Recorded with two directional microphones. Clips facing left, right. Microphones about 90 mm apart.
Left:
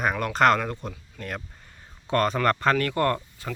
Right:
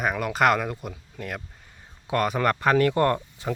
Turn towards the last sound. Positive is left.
turn(degrees=-20)  # may be behind; listen again after turning